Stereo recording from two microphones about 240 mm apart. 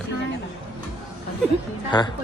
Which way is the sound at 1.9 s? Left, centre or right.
Centre.